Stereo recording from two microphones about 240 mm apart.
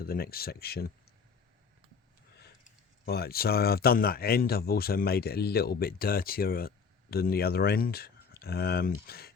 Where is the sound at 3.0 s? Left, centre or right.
Left.